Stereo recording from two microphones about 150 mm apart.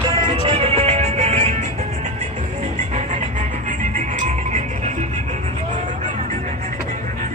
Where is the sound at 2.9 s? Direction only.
55° right (ahead or behind).